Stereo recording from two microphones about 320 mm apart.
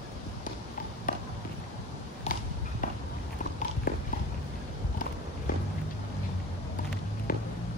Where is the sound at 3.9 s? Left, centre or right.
Left.